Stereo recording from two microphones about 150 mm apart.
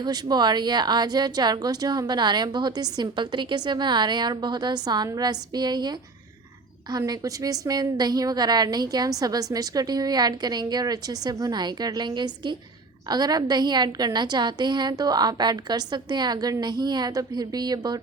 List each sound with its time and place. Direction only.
0.0 s a woman's voice: 30° right (ahead or behind)
6.9 s a woman's voice: 25° right (ahead or behind)